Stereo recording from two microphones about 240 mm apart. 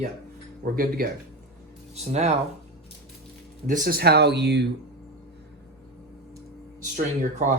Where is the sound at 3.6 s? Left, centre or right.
Right.